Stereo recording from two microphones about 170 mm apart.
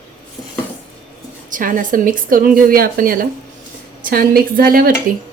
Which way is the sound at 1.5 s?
55° right (ahead or behind).